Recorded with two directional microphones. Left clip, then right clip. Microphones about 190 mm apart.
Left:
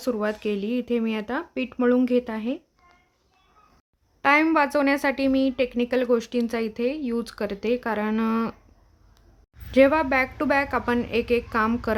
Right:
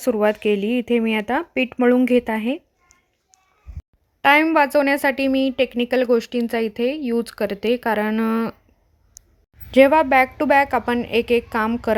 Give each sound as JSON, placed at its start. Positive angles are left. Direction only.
{"t": 0.0, "sound": "speech", "side_deg": -25}
{"t": 4.2, "sound": "speech", "side_deg": -20}
{"t": 9.7, "sound": "speech", "side_deg": -20}